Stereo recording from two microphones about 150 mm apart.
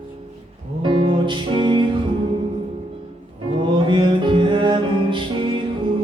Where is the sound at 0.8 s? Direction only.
30° right (ahead or behind).